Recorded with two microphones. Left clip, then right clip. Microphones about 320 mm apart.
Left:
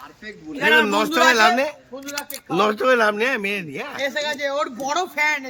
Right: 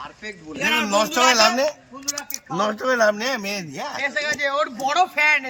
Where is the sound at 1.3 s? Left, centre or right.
Centre.